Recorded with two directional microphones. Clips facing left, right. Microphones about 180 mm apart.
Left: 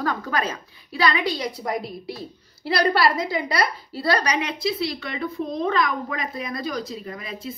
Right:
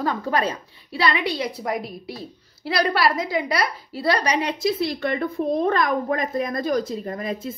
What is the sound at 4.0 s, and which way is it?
Speech, 25° right (ahead or behind).